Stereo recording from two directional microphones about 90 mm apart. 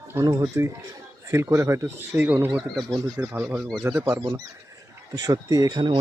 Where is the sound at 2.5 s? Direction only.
50° right (ahead or behind).